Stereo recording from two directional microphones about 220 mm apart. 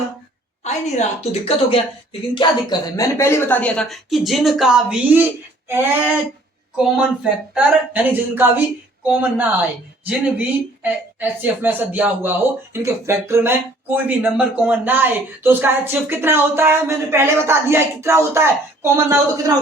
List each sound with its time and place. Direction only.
0.6 s a woman's voice: 30° left (ahead or behind); by 19.1 s 10° right (ahead or behind)